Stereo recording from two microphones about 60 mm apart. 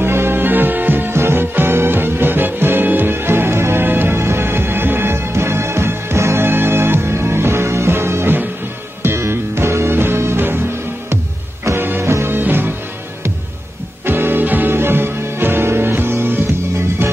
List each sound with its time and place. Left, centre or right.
0.0 s music: right
11.7 s music: right
14.0 s music: right